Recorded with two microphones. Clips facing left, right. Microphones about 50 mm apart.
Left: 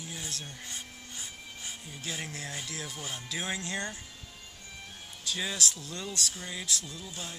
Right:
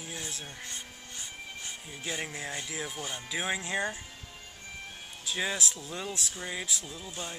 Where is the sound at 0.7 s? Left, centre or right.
Centre.